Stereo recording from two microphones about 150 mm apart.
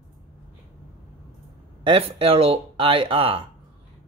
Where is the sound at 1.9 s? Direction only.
40° right (ahead or behind).